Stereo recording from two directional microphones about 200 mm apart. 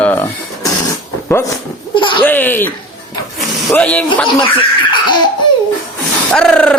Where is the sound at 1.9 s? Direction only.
25° left (ahead or behind).